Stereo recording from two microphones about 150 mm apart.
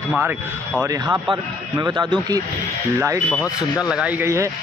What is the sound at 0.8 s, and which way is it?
A man's voice, 20° right (ahead or behind).